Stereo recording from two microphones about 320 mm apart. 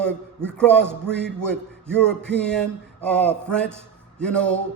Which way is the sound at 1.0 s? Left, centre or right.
Left.